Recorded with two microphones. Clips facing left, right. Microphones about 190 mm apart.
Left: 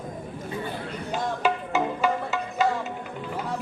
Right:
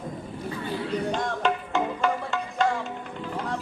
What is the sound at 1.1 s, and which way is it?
Music, 5° left (ahead or behind).